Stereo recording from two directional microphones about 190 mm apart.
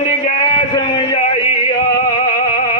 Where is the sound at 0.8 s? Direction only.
25° left (ahead or behind).